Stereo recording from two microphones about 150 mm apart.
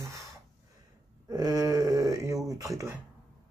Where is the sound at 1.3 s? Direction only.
25° right (ahead or behind).